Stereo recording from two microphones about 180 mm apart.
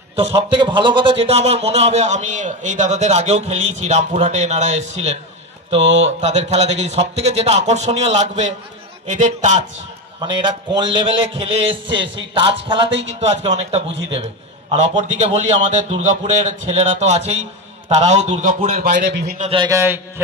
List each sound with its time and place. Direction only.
0.1 s a man's voice: 25° right (ahead or behind)
6.2 s a man's voice: 40° right (ahead or behind)
10.2 s a man's voice: 25° right (ahead or behind)
13.2 s a man's voice: 35° right (ahead or behind)
19.0 s a man's voice: 65° right (ahead or behind)
19.3 s a man's voice: 40° right (ahead or behind)
19.6 s a man's voice: 15° right (ahead or behind)